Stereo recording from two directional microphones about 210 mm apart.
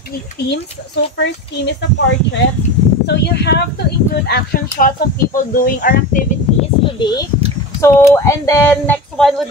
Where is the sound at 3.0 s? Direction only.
50° left (ahead or behind).